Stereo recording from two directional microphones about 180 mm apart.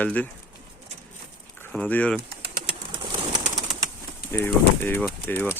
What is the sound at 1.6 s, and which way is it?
Speech, 10° left (ahead or behind).